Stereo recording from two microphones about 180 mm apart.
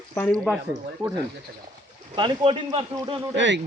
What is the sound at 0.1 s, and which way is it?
Speech, 15° left (ahead or behind).